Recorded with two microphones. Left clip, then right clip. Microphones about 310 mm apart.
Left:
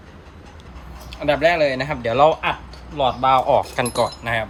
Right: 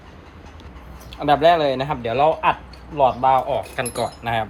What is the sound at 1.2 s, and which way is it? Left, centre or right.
Speech, right.